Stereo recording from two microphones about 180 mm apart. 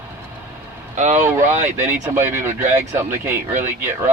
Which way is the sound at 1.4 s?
40° right (ahead or behind).